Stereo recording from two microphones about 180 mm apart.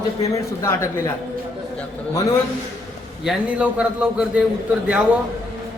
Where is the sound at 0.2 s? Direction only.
15° left (ahead or behind).